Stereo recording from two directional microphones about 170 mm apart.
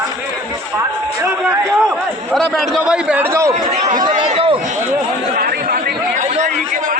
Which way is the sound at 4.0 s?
30° right (ahead or behind).